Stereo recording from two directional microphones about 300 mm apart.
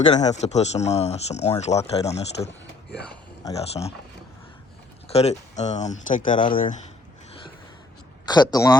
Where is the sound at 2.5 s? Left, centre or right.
Left.